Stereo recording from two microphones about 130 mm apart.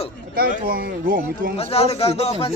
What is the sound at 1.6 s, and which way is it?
Speech, 50° left (ahead or behind).